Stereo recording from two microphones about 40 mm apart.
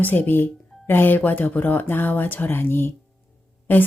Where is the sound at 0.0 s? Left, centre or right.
Left.